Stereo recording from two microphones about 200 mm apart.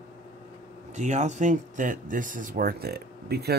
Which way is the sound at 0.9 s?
35° right (ahead or behind).